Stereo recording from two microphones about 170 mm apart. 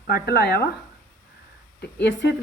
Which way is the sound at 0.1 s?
70° left (ahead or behind).